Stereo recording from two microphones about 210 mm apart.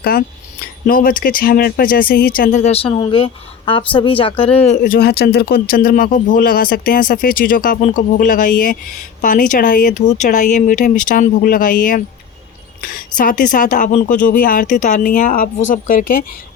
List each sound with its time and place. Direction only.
0.0 s speech: 45° left (ahead or behind); by 4.8 s 30° left (ahead or behind)
4.8 s speech: 50° left (ahead or behind)